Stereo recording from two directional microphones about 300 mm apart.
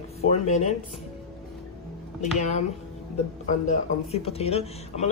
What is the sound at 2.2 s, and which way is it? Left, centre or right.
Speech, left.